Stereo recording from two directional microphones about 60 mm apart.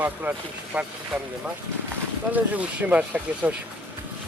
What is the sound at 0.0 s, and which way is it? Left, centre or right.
Speech, right.